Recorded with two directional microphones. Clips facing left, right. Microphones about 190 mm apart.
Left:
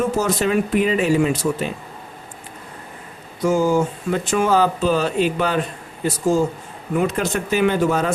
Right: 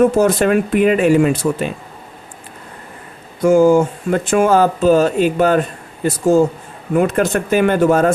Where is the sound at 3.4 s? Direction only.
55° right (ahead or behind).